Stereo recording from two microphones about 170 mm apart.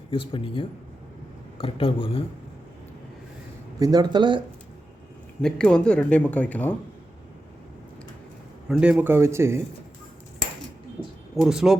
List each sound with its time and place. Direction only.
0.1 s speech: 30° left (ahead or behind)
3.8 s speech: 20° right (ahead or behind)
5.4 s speech: 5° left (ahead or behind)
8.7 s speech: 5° right (ahead or behind)
11.3 s speech: 5° right (ahead or behind)